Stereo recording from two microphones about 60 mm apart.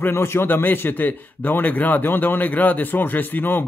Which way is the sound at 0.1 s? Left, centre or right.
Left.